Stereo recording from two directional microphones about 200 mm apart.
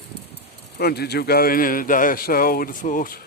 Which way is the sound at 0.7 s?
50° left (ahead or behind).